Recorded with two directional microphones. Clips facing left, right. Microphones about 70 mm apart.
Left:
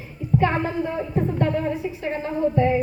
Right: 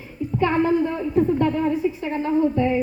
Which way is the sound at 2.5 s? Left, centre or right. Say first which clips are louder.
Left 1 dB; left.